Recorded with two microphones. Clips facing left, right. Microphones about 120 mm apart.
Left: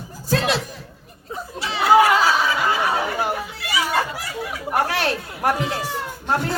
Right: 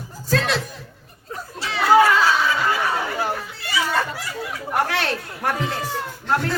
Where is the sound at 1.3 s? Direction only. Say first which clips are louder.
Left 1 dB; 10° left (ahead or behind).